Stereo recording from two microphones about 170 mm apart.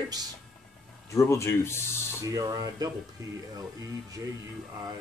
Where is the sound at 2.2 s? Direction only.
20° right (ahead or behind).